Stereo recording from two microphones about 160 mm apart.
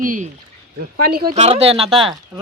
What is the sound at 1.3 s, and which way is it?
Speech, 40° right (ahead or behind).